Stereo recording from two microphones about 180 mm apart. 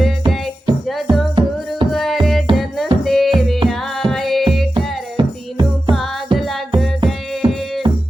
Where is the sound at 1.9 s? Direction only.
Centre (ahead or behind).